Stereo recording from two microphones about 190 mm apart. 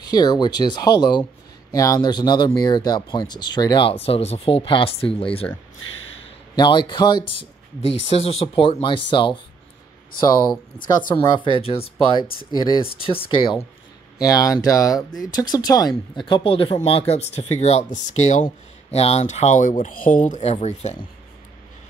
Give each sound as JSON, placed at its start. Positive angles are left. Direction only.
{"t": 0.0, "sound": "speech", "side_deg": 20}
{"t": 6.5, "sound": "speech", "side_deg": 25}
{"t": 11.1, "sound": "speech", "side_deg": 25}